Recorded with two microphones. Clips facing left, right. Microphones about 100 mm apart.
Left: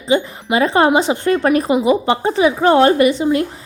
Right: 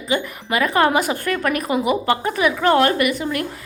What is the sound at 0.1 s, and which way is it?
A woman's voice, 25° left (ahead or behind).